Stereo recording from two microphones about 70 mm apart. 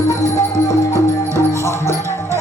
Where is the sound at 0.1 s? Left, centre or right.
Left.